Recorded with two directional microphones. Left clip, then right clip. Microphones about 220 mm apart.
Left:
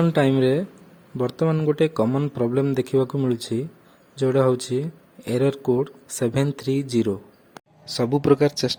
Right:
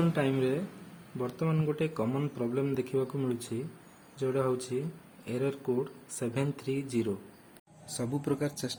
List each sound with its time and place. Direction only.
0.0 s speech: 30° left (ahead or behind)